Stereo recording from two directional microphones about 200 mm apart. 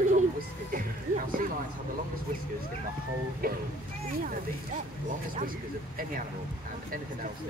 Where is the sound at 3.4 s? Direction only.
50° right (ahead or behind).